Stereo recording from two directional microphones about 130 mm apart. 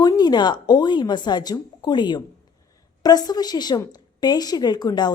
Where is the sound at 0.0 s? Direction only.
30° left (ahead or behind).